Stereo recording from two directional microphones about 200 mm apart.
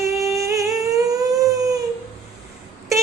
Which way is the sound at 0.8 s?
15° right (ahead or behind).